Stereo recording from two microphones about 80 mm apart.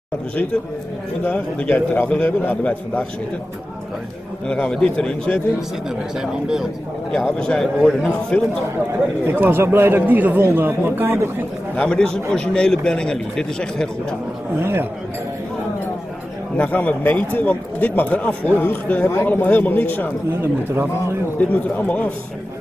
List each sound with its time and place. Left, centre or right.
1.2 s a man's voice: centre
4.5 s a man's voice: centre
6.1 s speech: centre
7.3 s a man's voice: centre
9.2 s a man's voice: right
11.7 s a man's voice: centre
14.6 s speech: right
16.5 s a man's voice: centre
21.4 s a man's voice: centre